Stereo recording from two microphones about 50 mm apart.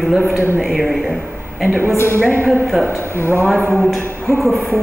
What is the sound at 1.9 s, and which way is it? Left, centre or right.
Speech, left.